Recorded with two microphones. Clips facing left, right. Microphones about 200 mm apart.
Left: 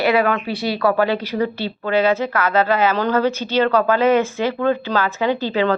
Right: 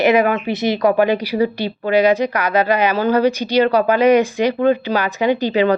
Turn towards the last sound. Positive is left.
turn(degrees=-15)  # may be behind; listen again after turning